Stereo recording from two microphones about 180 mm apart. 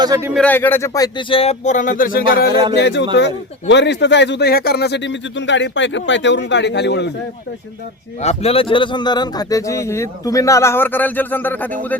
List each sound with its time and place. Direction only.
0.0 s speech: 20° right (ahead or behind)
0.3 s speech: 10° left (ahead or behind); by 2.5 s 55° left (ahead or behind)
2.5 s speech: 25° right (ahead or behind)
2.7 s speech: 75° left (ahead or behind)
8.2 s a man's voice: 35° left (ahead or behind); by 11.9 s 10° left (ahead or behind)